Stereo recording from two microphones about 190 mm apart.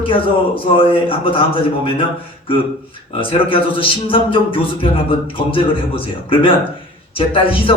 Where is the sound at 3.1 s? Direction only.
25° left (ahead or behind).